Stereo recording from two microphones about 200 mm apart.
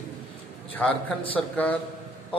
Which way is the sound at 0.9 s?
25° left (ahead or behind).